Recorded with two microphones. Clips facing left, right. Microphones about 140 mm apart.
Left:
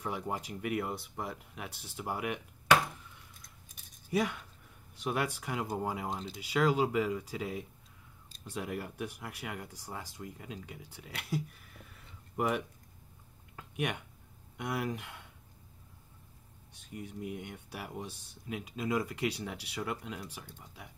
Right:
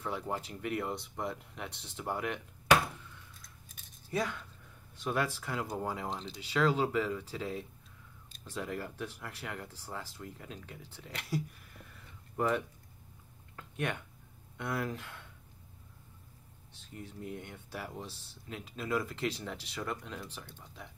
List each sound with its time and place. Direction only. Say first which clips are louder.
0.0 s speech: even; 15° left (ahead or behind)
3.7 s keys jangling: left 3 dB; 15° left (ahead or behind)
5.0 s speech: even; 15° left (ahead or behind)
13.6 s a sound: left 1 dB; 15° left (ahead or behind)
14.6 s speech: left 1 dB; 15° left (ahead or behind)
16.9 s speech: left 2 dB; 15° left (ahead or behind)